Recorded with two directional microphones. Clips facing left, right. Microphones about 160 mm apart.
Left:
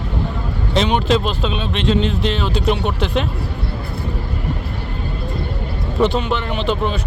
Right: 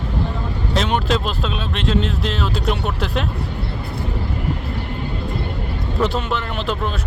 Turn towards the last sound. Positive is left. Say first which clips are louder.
# left 4 dB
turn(degrees=0)  # may be behind; listen again after turning